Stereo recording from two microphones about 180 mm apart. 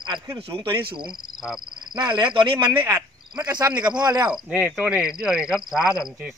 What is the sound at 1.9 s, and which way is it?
Speech, 25° right (ahead or behind).